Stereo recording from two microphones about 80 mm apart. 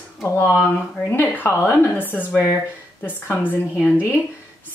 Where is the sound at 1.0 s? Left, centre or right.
Left.